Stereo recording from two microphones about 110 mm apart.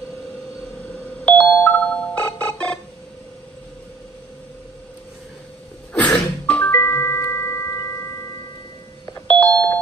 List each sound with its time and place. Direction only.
1.2 s music: 15° left (ahead or behind)
5.9 s music: 10° left (ahead or behind)
9.3 s doorbell: 15° left (ahead or behind)